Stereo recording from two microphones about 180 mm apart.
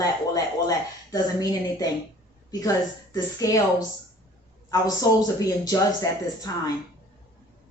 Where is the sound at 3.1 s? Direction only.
20° left (ahead or behind).